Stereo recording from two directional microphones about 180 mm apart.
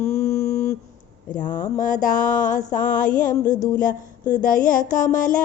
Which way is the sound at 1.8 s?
45° left (ahead or behind).